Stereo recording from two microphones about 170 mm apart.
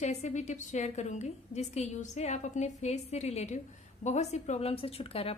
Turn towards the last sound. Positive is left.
turn(degrees=35)  # may be behind; listen again after turning